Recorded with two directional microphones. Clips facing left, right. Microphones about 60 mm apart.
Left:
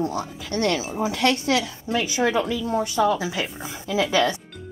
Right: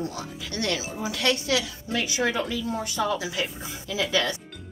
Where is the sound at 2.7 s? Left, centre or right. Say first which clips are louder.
Left 9 dB; left.